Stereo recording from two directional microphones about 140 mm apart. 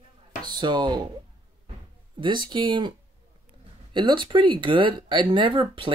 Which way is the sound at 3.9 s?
35° right (ahead or behind).